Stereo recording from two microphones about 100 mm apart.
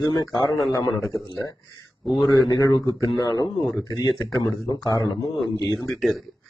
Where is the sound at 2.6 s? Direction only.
40° left (ahead or behind).